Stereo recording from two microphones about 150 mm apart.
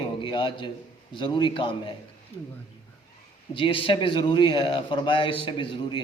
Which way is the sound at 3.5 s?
35° left (ahead or behind).